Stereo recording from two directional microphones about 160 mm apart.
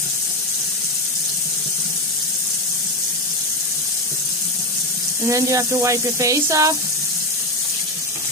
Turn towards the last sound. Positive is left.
turn(degrees=-20)  # may be behind; listen again after turning